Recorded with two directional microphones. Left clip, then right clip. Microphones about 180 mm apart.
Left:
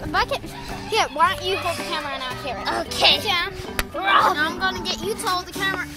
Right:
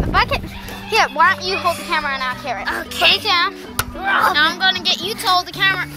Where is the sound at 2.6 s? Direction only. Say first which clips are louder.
Right 2 dB; 40° left (ahead or behind).